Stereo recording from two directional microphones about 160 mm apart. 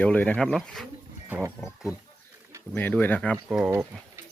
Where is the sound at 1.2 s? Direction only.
10° right (ahead or behind).